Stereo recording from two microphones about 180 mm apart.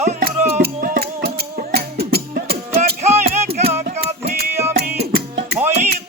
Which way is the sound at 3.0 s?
35° right (ahead or behind).